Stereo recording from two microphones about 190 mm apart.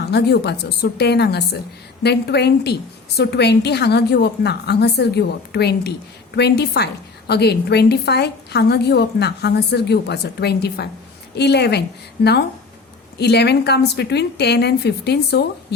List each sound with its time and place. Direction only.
0.1 s a woman's voice: 60° left (ahead or behind)
13.1 s a woman's voice: 60° left (ahead or behind)